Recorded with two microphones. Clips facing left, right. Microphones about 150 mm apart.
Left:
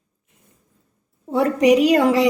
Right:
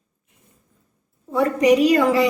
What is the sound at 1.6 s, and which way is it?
Speech, 75° left (ahead or behind).